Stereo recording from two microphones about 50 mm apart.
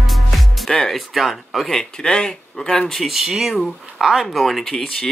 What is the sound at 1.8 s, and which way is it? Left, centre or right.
Speech, centre.